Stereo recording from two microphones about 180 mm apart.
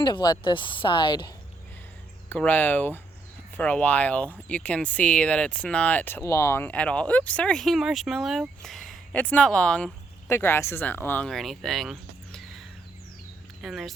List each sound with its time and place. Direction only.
0.0 s a woman's voice: 25° left (ahead or behind)
2.3 s speech: 10° left (ahead or behind)